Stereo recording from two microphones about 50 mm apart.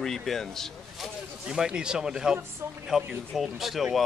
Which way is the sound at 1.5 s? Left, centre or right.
Centre.